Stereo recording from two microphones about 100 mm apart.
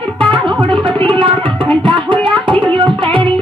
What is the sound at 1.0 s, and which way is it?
Music, 55° right (ahead or behind).